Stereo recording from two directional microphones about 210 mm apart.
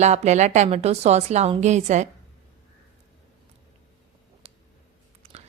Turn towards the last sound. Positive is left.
turn(degrees=-25)  # may be behind; listen again after turning